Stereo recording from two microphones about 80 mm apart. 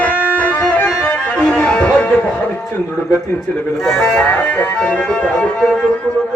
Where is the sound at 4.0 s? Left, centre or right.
Left.